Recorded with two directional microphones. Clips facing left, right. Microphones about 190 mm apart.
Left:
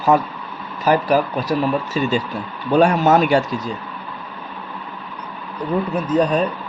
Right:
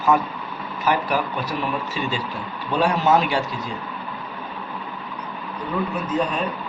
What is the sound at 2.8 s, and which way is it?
Speech, 50° left (ahead or behind).